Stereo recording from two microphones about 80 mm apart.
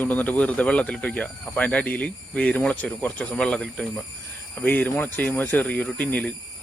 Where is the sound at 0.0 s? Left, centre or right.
Centre.